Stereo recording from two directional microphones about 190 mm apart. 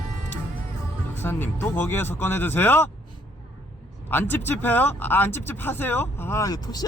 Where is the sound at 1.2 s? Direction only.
10° left (ahead or behind).